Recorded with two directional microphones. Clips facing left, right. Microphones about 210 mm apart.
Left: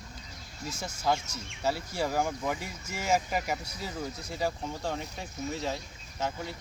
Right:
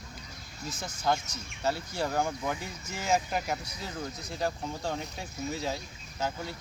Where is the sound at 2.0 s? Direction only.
5° left (ahead or behind).